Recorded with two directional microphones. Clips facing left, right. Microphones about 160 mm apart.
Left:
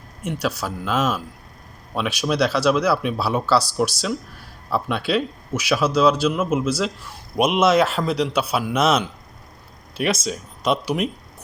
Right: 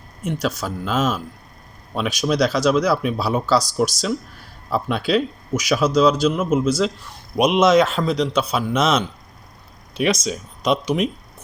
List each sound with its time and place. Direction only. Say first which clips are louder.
0.3 s a man's voice: right 1 dB; 5° left (ahead or behind)